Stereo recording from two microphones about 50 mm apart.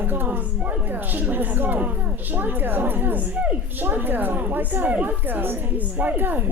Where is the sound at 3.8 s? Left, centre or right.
Right.